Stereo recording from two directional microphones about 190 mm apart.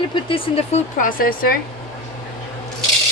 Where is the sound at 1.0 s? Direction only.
50° left (ahead or behind).